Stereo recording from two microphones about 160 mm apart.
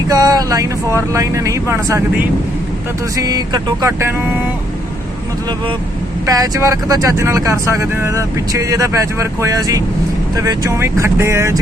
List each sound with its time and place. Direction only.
0.1 s speech: 25° right (ahead or behind)
3.2 s speech: 25° right (ahead or behind)
6.2 s speech: 20° right (ahead or behind)